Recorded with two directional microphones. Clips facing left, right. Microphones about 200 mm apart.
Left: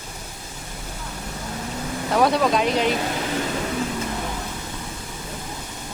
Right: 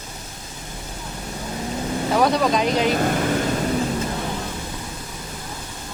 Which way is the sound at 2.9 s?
50° right (ahead or behind).